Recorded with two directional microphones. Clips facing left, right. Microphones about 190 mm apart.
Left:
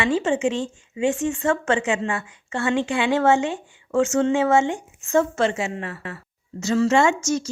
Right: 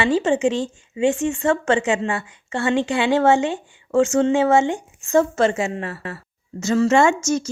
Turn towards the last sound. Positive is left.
turn(degrees=-50)  # may be behind; listen again after turning